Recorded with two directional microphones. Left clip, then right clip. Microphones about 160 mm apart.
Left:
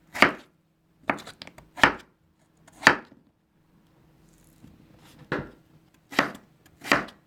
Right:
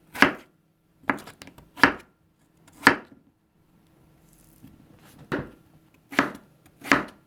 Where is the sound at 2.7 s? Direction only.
15° right (ahead or behind).